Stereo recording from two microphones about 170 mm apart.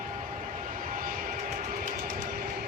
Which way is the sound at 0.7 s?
55° right (ahead or behind).